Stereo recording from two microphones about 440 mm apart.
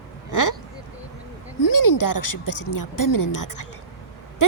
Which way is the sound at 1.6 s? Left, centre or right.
Left.